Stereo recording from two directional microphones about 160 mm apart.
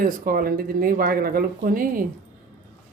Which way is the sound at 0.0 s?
60° right (ahead or behind).